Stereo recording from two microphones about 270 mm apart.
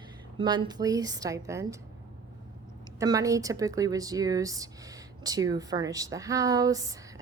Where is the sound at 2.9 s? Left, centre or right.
Centre.